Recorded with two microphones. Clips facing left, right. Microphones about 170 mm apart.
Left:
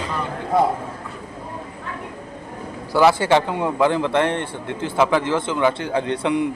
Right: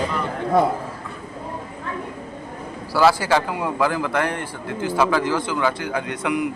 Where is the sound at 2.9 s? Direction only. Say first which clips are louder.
Left 2 dB; 20° left (ahead or behind).